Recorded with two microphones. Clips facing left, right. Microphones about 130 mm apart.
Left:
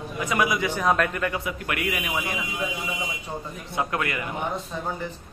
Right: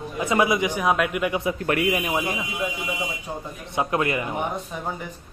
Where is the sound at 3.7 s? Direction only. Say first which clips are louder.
Right 4 dB; 20° right (ahead or behind).